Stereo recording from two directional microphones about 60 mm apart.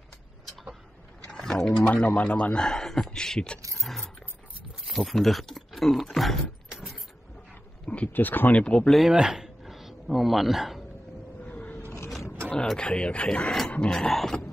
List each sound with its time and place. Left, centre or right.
1.2 s a sound: centre
1.9 s speech: left
3.7 s music: centre
4.8 s speech: centre
6.7 s vehicle: centre
7.8 s wild animals: left
8.1 s speech: left
8.5 s speech: centre
9.1 s a sound: centre
11.4 s a sound: left
12.7 s speech: centre